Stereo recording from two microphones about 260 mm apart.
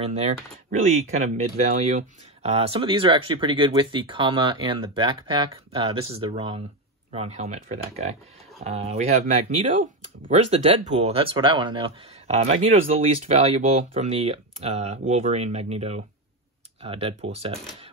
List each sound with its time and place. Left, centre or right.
0.7 s speech: right